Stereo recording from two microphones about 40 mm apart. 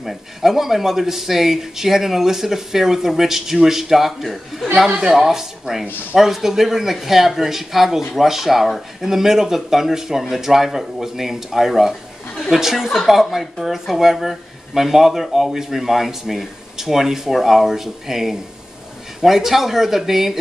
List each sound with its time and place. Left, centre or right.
0.0 s a woman's voice: centre